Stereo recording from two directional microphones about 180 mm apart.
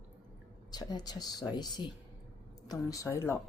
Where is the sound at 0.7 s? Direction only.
25° left (ahead or behind).